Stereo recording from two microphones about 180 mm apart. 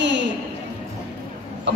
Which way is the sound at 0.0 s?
75° right (ahead or behind).